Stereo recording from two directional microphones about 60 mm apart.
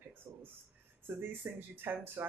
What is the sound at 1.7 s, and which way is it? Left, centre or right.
Speech, right.